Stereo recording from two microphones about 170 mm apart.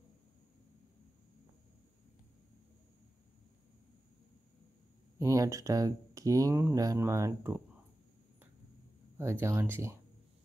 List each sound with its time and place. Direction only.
5.2 s speech: 20° right (ahead or behind)
9.2 s speech: 15° right (ahead or behind)